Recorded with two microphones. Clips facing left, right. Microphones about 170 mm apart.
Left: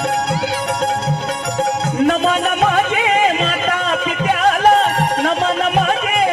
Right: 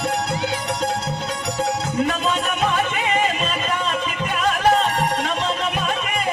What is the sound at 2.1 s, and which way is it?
Music, 65° left (ahead or behind).